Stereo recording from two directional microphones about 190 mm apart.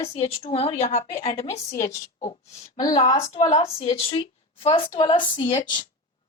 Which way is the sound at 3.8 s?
30° left (ahead or behind).